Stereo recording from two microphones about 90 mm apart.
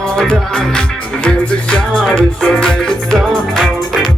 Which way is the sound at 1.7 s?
10° left (ahead or behind).